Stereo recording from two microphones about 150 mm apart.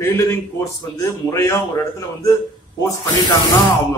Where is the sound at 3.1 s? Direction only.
25° left (ahead or behind).